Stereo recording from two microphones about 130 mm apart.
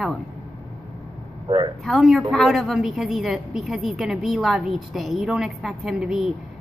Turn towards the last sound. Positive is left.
turn(degrees=-5)  # may be behind; listen again after turning